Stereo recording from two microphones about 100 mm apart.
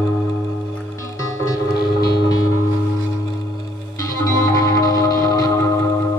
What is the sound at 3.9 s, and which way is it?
Music, 35° left (ahead or behind).